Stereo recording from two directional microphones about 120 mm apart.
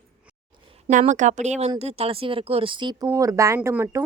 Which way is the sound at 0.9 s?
90° right.